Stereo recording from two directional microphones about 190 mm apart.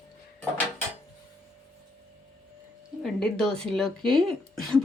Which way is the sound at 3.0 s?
Centre (ahead or behind).